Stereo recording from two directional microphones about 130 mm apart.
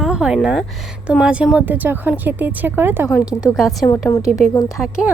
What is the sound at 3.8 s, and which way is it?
A woman's voice, 25° left (ahead or behind).